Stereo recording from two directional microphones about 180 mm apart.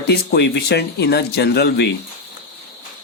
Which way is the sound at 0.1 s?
65° left (ahead or behind).